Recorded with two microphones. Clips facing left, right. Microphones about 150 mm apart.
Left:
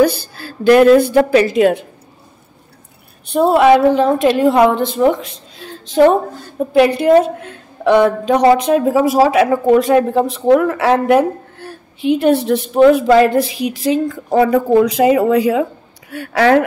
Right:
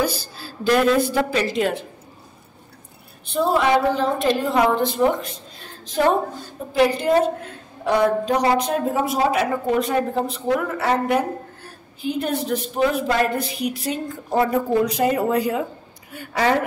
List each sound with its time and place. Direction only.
0.0 s a woman's voice: 60° left (ahead or behind)
3.3 s a woman's voice: 65° left (ahead or behind); by 16.6 s 80° left